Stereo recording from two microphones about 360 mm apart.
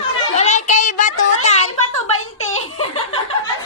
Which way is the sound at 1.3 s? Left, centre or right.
Centre.